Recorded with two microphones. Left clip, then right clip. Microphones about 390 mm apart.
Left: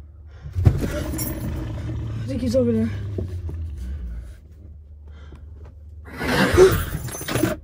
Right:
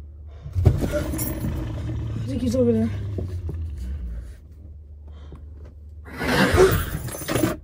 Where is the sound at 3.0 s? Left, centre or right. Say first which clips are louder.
Left 2 dB; centre.